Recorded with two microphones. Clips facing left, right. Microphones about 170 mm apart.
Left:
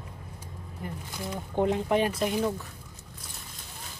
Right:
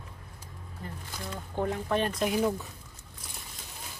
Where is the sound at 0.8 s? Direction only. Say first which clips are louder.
Left 4 dB; 15° left (ahead or behind).